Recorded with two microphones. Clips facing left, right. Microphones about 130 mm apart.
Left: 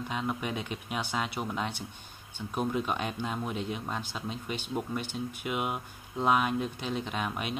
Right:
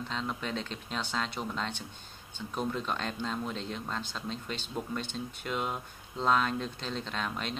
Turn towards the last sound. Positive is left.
turn(degrees=10)  # may be behind; listen again after turning